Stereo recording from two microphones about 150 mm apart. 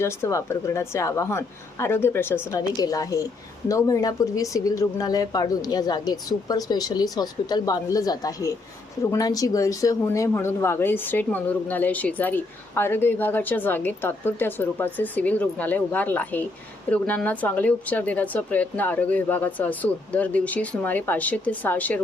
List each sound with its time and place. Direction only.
0.0 s a woman's voice: 20° left (ahead or behind)